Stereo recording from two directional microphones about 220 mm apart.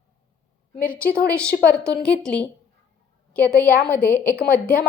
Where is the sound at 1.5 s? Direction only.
45° left (ahead or behind).